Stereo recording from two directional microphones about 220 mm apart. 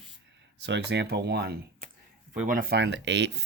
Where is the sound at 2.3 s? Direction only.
35° right (ahead or behind); by 3.3 s 55° right (ahead or behind).